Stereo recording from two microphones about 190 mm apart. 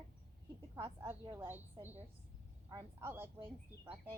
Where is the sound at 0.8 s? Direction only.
15° right (ahead or behind).